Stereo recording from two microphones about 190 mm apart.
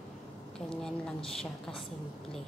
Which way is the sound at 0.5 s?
5° left (ahead or behind).